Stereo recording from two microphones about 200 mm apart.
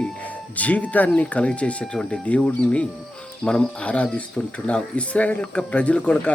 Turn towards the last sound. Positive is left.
turn(degrees=5)  # may be behind; listen again after turning